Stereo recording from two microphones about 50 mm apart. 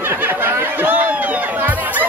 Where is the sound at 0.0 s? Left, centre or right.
Right.